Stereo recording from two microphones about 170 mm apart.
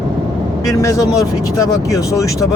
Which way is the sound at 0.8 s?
20° left (ahead or behind).